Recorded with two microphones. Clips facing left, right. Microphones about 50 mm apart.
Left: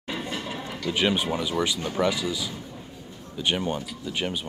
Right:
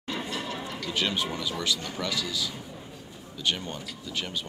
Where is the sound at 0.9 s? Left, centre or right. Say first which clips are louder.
Left 5 dB; left.